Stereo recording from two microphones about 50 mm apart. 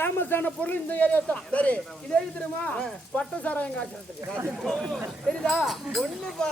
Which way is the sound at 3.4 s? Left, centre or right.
Left.